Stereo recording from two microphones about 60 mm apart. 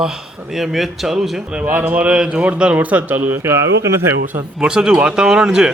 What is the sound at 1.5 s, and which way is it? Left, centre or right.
Speech, right.